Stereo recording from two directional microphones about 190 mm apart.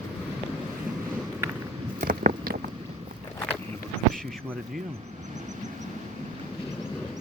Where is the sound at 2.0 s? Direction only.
50° right (ahead or behind).